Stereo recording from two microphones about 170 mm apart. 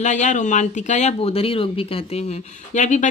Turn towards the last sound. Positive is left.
turn(degrees=45)  # may be behind; listen again after turning